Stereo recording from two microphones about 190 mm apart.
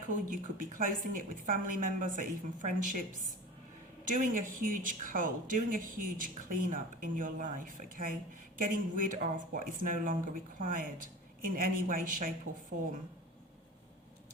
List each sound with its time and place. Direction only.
0.1 s a woman's voice: 45° right (ahead or behind)